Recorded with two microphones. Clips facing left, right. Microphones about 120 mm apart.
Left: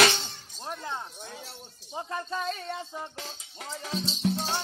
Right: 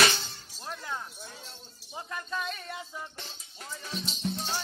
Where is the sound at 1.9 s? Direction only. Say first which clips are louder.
Left 3 dB; 30° left (ahead or behind).